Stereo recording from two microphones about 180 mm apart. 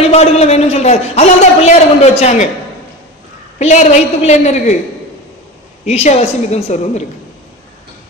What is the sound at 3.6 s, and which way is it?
A man's voice, 35° left (ahead or behind).